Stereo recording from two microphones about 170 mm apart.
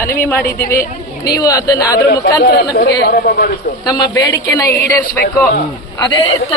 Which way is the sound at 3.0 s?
60° left (ahead or behind).